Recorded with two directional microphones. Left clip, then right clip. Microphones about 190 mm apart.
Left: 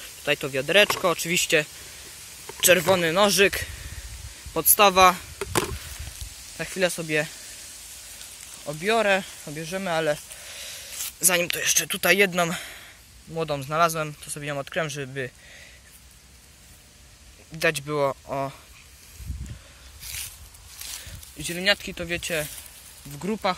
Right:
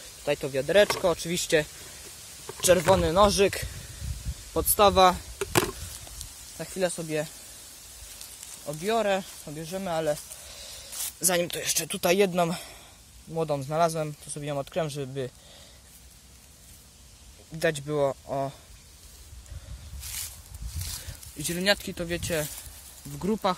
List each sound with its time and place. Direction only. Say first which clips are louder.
0.2 s speech: left 3 dB; centre (ahead or behind)
5.4 s chop: right 5 dB; 25° right (ahead or behind)
6.6 s speech: left 4 dB; 10° left (ahead or behind)
8.6 s speech: left 4 dB; 10° left (ahead or behind)
11.1 s speech: left 4 dB; 15° right (ahead or behind)
17.6 s speech: left 2 dB; 5° right (ahead or behind)
20.0 s a sound: left 2 dB; 15° right (ahead or behind)
21.4 s speech: left 2 dB; 35° right (ahead or behind)